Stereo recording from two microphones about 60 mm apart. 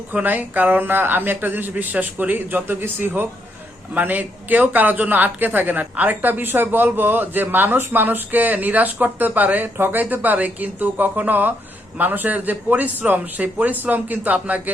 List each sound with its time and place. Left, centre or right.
0.1 s speech: right